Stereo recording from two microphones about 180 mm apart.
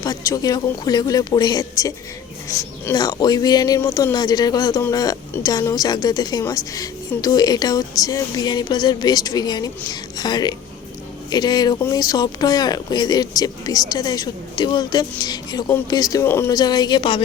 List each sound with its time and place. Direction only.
0.0 s speech: 20° left (ahead or behind)